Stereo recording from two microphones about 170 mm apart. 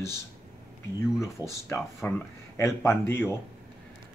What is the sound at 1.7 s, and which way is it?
Speech, 10° left (ahead or behind).